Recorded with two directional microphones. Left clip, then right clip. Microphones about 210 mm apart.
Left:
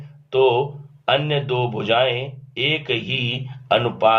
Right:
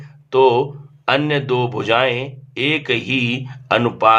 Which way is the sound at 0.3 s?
30° right (ahead or behind).